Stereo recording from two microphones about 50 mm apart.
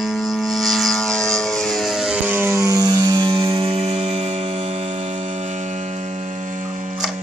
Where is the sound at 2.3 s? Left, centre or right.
Right.